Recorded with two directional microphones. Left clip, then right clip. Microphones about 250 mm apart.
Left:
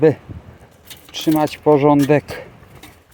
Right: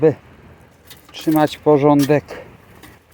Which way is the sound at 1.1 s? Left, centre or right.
Centre.